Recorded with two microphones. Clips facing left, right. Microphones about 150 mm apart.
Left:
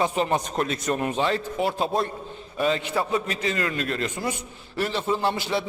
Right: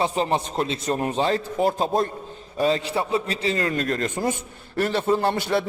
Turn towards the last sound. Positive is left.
turn(degrees=-50)  # may be behind; listen again after turning